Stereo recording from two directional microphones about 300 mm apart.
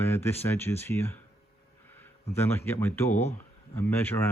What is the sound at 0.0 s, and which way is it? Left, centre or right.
Speech, centre.